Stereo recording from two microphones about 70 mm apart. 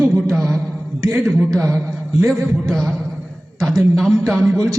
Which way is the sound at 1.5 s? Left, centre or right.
Right.